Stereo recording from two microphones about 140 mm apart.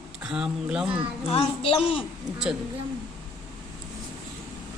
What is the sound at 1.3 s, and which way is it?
Speech, 40° left (ahead or behind).